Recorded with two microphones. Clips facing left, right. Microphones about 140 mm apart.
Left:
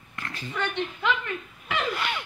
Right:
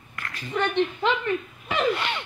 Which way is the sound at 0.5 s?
30° right (ahead or behind).